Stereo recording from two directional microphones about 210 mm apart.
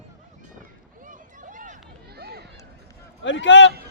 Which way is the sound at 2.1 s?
50° right (ahead or behind).